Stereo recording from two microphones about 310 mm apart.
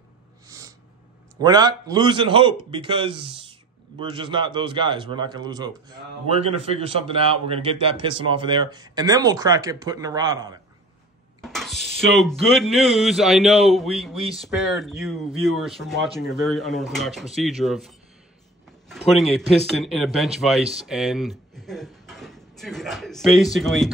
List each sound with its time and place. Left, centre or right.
0.5 s gasp: centre
1.4 s a man's voice: centre
11.4 s speech: centre